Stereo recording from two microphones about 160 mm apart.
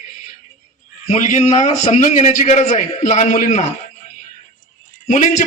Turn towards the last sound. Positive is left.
turn(degrees=50)  # may be behind; listen again after turning